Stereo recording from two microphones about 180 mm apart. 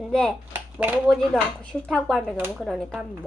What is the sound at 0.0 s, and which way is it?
Speech, 5° left (ahead or behind).